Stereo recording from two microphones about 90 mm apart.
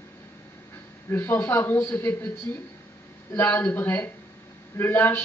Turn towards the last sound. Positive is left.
turn(degrees=25)  # may be behind; listen again after turning